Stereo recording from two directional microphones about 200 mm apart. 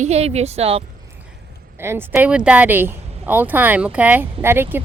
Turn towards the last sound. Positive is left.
turn(degrees=-10)  # may be behind; listen again after turning